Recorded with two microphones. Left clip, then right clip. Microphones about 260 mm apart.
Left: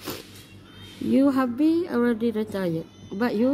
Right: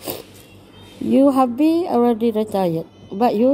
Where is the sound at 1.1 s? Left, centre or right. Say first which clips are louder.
Right 7 dB; centre.